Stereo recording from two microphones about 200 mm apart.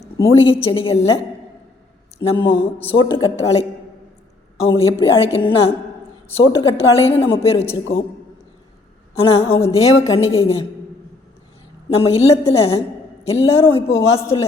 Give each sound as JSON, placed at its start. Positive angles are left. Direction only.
{"t": 0.4, "sound": "a woman's voice", "side_deg": 25}
{"t": 2.2, "sound": "a woman's voice", "side_deg": 25}
{"t": 9.1, "sound": "a woman's voice", "side_deg": 30}
{"t": 9.6, "sound": "a woman's voice", "side_deg": 15}
{"t": 10.2, "sound": "a woman's voice", "side_deg": 75}
{"t": 10.4, "sound": "a woman's voice", "side_deg": 30}
{"t": 11.9, "sound": "a woman's voice", "side_deg": 30}